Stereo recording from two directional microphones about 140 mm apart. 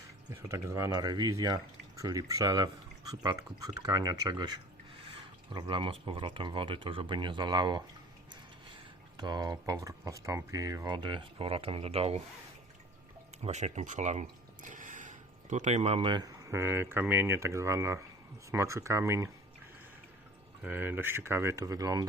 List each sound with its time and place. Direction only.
0.4 s speech: 20° right (ahead or behind); by 12.2 s 45° right (ahead or behind)
13.4 s speech: 55° right (ahead or behind); by 16.3 s 35° right (ahead or behind)
16.4 s speech: 20° right (ahead or behind)
20.7 s speech: 15° right (ahead or behind)